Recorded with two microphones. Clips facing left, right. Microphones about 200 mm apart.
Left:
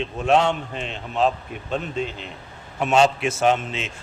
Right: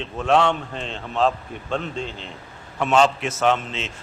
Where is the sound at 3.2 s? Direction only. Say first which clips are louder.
Left 1 dB; 10° left (ahead or behind).